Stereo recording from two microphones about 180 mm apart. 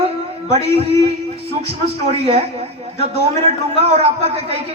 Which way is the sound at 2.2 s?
35° right (ahead or behind).